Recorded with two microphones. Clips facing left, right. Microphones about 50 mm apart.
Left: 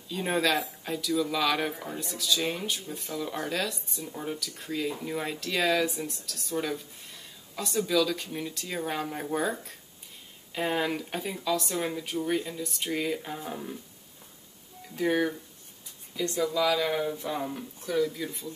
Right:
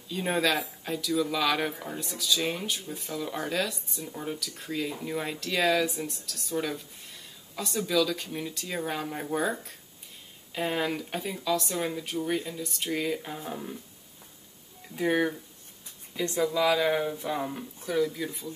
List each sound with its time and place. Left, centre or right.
0.1 s speech: centre
15.0 s speech: centre